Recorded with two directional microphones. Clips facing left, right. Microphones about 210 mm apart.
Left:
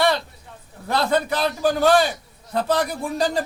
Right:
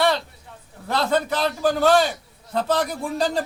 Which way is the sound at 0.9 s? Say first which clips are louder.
Left 1 dB; 15° left (ahead or behind).